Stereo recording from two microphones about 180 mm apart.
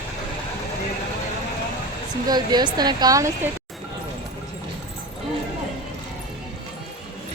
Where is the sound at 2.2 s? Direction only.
20° right (ahead or behind).